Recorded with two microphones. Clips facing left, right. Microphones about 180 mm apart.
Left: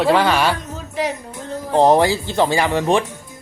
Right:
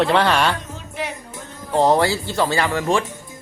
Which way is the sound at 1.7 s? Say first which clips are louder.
Left 3 dB; 20° left (ahead or behind).